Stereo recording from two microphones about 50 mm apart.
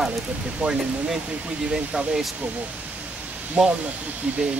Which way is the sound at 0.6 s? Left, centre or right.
Right.